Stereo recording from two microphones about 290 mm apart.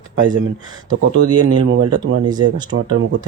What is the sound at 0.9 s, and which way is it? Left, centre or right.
Speech, right.